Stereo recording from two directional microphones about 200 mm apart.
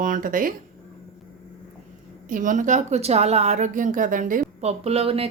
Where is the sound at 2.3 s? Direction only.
40° right (ahead or behind).